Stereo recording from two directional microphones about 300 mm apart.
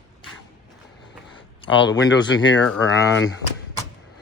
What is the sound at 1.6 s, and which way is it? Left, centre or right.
Speech, left.